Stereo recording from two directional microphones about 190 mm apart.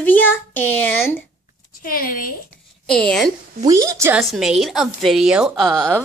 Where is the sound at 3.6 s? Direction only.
15° right (ahead or behind).